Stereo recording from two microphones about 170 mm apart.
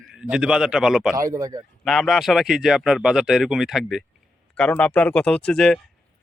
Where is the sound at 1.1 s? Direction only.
20° right (ahead or behind).